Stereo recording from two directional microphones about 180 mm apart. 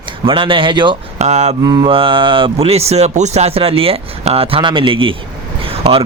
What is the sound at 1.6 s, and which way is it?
A man's voice, 20° right (ahead or behind).